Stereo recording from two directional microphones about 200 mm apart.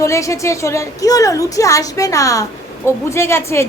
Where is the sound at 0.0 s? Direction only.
15° left (ahead or behind).